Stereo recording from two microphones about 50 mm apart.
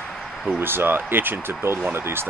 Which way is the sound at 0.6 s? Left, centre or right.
Right.